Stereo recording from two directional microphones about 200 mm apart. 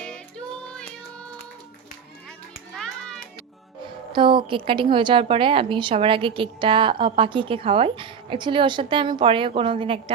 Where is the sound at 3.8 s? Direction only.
25° right (ahead or behind).